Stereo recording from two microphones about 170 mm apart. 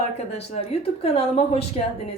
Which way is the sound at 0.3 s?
40° left (ahead or behind).